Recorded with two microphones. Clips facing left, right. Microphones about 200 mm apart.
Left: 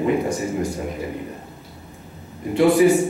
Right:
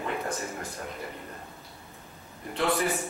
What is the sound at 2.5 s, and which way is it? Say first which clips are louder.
Speech: left 13 dB; 15° left (ahead or behind).